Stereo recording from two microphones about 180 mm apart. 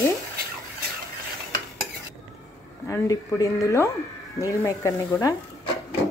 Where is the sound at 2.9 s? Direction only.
15° left (ahead or behind).